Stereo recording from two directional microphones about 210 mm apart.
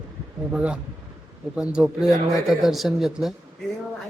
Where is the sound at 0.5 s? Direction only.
5° right (ahead or behind).